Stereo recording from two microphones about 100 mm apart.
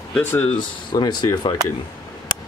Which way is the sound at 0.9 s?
45° left (ahead or behind).